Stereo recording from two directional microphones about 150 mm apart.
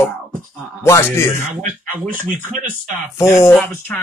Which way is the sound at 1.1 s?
15° left (ahead or behind).